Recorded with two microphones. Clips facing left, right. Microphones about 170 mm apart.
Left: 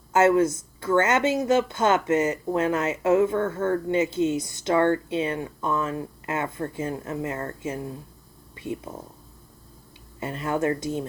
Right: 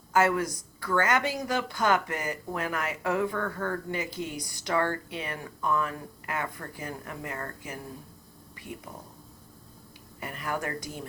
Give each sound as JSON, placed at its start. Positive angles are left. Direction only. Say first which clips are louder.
{"t": 0.1, "sound": "speech", "louder": "left 6 dB", "side_deg": 25}
{"t": 10.2, "sound": "speech", "louder": "left 7 dB", "side_deg": 25}